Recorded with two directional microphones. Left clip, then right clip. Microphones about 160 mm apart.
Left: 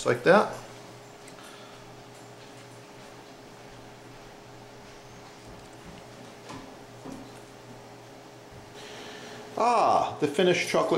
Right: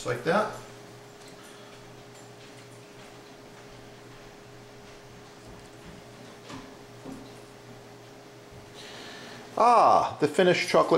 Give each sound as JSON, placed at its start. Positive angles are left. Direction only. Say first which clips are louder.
{"t": 0.0, "sound": "speech", "louder": "left 5 dB", "side_deg": 0}
{"t": 9.6, "sound": "speech", "louder": "right 4 dB", "side_deg": -15}
{"t": 9.8, "sound": "speech", "louder": "right 2 dB", "side_deg": 5}